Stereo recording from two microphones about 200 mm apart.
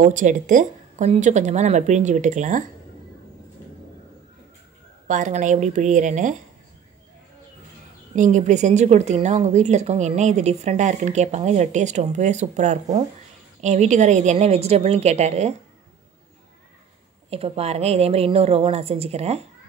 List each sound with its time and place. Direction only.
0.0 s a woman's voice: 40° right (ahead or behind)
5.0 s a woman's voice: 40° right (ahead or behind)
8.1 s a woman's voice: 35° right (ahead or behind)
17.3 s a woman's voice: 30° right (ahead or behind)